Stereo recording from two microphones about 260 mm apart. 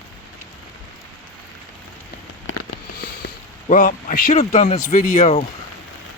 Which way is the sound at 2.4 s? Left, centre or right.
Left.